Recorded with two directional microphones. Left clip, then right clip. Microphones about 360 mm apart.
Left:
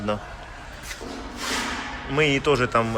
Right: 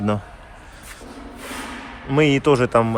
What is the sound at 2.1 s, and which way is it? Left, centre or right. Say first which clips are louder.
Speech: right 4 dB; centre.